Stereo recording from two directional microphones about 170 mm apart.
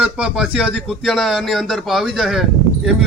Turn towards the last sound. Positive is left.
turn(degrees=-5)  # may be behind; listen again after turning